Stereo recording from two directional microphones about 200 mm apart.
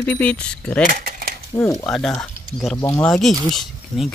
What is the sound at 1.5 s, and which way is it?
Speech, 15° left (ahead or behind).